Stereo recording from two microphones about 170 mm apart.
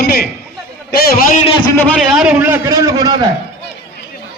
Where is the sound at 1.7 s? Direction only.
10° left (ahead or behind).